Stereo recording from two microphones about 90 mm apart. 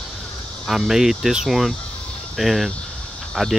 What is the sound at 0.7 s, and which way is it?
Speech, 5° right (ahead or behind).